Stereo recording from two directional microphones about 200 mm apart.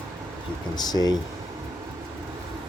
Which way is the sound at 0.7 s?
20° left (ahead or behind).